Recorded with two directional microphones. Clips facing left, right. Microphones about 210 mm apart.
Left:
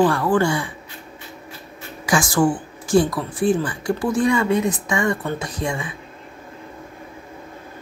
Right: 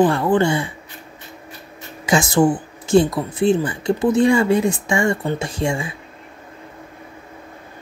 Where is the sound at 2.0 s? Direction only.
25° right (ahead or behind).